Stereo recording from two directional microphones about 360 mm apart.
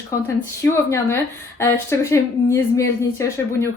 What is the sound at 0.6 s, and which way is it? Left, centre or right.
Speech, centre.